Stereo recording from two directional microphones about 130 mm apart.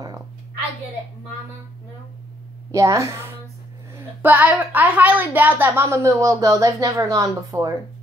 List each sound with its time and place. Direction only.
2.7 s a woman's voice: 25° right (ahead or behind)